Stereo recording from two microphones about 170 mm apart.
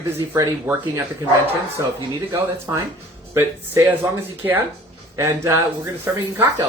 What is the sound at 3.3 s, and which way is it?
Speech, 15° right (ahead or behind).